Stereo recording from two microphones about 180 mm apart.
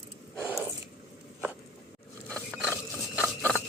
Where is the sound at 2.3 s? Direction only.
5° left (ahead or behind).